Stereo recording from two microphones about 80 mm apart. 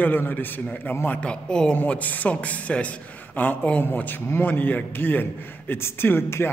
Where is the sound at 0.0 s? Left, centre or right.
Left.